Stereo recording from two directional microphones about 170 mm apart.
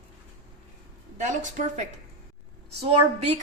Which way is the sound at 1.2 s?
45° right (ahead or behind).